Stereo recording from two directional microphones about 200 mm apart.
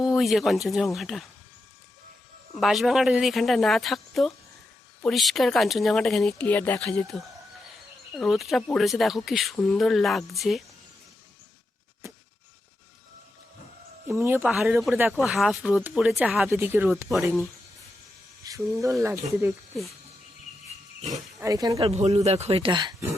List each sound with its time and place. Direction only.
0.0 s speech: centre (ahead or behind)
2.6 s speech: centre (ahead or behind)
14.1 s speech: 10° right (ahead or behind)
18.4 s speech: 15° right (ahead or behind)
21.4 s speech: 15° right (ahead or behind)
21.8 s speech: 30° right (ahead or behind)